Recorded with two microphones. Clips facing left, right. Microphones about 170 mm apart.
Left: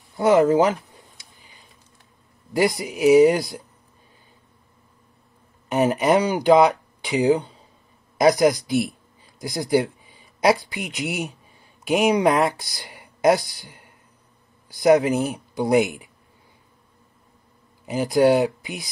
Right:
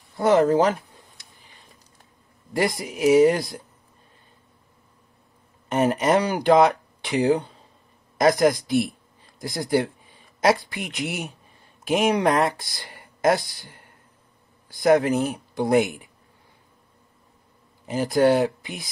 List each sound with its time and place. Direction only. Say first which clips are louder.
0.2 s speech: left 2 dB; 5° left (ahead or behind)
2.5 s speech: left 3 dB; 5° left (ahead or behind)
5.7 s speech: left 1 dB; centre (ahead or behind)
14.8 s speech: left 2 dB; centre (ahead or behind)
17.8 s speech: left 1 dB; 5° left (ahead or behind)